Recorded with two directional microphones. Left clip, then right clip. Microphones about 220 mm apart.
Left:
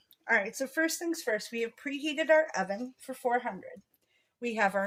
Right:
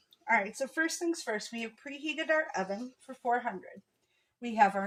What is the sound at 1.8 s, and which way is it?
Speech, 35° left (ahead or behind).